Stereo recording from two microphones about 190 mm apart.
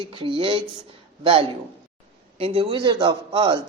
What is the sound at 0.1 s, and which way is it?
A man's voice, 30° right (ahead or behind).